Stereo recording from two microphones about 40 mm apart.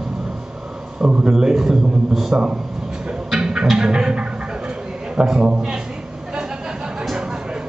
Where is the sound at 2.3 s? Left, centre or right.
Right.